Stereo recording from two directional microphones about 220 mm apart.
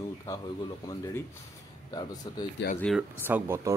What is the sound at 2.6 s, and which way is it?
Speech, 55° left (ahead or behind).